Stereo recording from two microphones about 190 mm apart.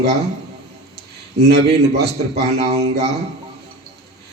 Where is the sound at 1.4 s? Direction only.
60° right (ahead or behind).